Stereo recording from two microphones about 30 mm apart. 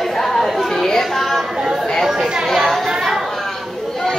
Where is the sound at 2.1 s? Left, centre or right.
Centre.